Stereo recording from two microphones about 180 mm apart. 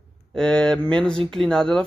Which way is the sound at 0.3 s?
5° left (ahead or behind).